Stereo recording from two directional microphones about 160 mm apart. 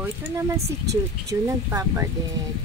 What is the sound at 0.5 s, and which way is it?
Speech, 20° right (ahead or behind).